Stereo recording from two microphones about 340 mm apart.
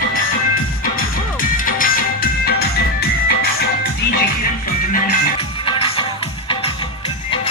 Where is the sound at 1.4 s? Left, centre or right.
Left.